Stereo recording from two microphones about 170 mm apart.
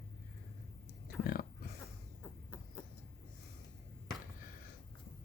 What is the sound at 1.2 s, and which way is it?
Pig, 60° left (ahead or behind).